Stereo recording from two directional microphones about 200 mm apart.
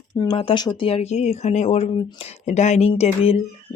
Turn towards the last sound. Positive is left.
turn(degrees=30)  # may be behind; listen again after turning